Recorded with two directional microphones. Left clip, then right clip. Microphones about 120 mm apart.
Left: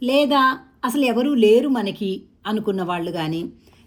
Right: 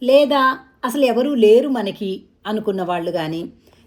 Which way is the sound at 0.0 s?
40° left (ahead or behind).